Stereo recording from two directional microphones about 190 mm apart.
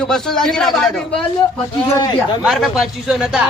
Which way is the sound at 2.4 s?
Centre (ahead or behind).